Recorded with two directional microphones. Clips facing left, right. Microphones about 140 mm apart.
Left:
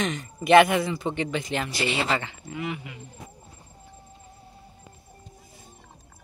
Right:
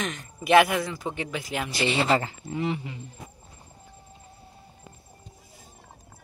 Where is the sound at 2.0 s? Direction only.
35° right (ahead or behind).